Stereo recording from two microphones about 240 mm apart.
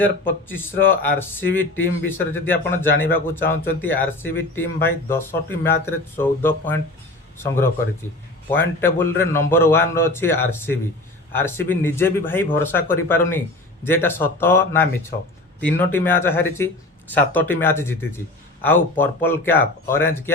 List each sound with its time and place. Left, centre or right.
0.0 s speech: centre